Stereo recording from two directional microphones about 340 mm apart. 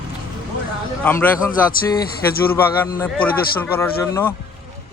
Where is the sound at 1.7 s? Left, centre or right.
Left.